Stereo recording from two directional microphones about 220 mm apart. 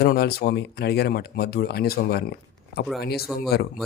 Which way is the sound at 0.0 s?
45° left (ahead or behind).